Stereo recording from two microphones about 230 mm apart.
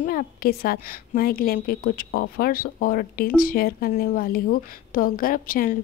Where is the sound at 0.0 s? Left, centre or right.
Left.